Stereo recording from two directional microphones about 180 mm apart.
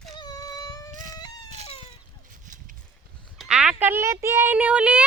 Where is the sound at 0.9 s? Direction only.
45° right (ahead or behind).